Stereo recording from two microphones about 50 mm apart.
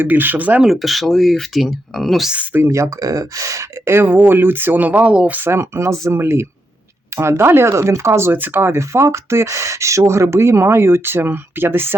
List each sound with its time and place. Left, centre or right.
0.0 s speech: right
0.6 s speech: centre
2.6 s speech: right
3.8 s speech: right
5.4 s speech: right
6.1 s speech: right
8.3 s speech: right
8.7 s speech: right